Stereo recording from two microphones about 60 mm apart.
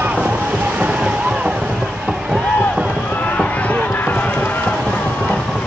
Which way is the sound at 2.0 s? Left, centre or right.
Centre.